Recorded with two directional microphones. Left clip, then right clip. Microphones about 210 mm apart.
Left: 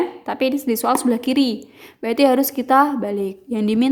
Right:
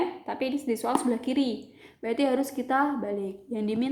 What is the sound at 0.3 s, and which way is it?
A woman's voice, 45° left (ahead or behind).